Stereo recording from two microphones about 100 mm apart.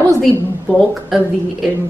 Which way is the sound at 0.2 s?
Centre (ahead or behind).